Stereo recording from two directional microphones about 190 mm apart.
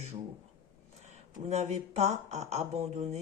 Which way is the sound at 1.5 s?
35° right (ahead or behind).